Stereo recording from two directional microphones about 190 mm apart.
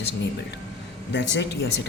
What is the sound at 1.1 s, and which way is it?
Speech, 65° left (ahead or behind).